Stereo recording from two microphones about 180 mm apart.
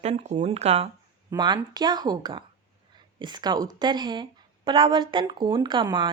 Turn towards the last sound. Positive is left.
turn(degrees=-25)  # may be behind; listen again after turning